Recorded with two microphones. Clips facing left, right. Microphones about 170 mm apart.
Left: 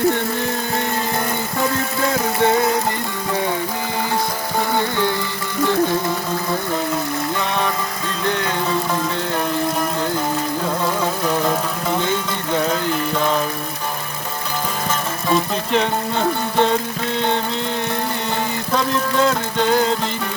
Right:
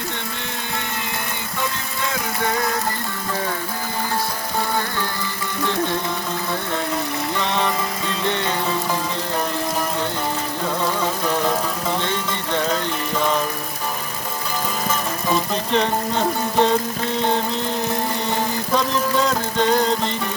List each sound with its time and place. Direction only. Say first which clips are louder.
2.4 s music: left 6 dB; 25° left (ahead or behind)
8.2 s music: left 2 dB; centre (ahead or behind)
10.8 s music: left 1 dB; 5° left (ahead or behind)
15.3 s music: left 2 dB; centre (ahead or behind)